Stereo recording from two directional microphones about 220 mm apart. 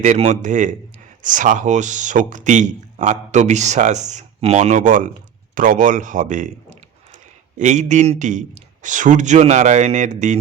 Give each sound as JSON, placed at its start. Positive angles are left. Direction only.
{"t": 0.0, "sound": "speech", "side_deg": -30}